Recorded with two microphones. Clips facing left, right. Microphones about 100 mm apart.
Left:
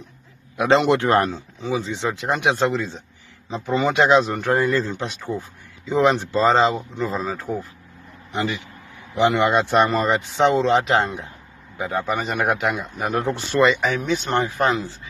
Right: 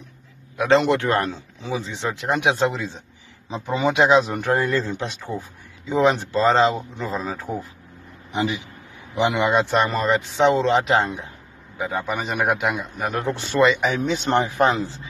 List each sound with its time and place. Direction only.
0.6 s a man's voice: 10° left (ahead or behind)
1.2 s speech: centre (ahead or behind)
13.9 s speech: 25° right (ahead or behind)